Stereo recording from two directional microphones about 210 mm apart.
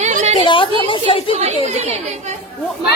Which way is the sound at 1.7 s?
30° right (ahead or behind).